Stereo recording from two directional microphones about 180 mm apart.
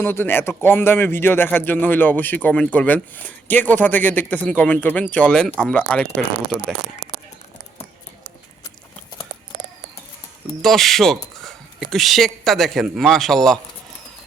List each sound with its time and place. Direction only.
0.0 s a man's voice: 10° left (ahead or behind)
10.6 s speech: centre (ahead or behind)